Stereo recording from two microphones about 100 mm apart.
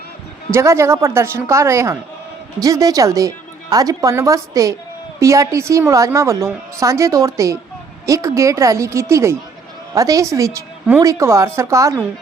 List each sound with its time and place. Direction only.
0.5 s a woman's voice: 30° right (ahead or behind)